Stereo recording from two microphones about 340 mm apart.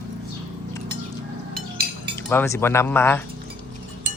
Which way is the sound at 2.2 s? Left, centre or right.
Centre.